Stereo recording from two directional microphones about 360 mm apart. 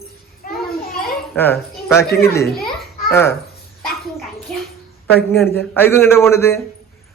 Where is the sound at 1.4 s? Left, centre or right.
Centre.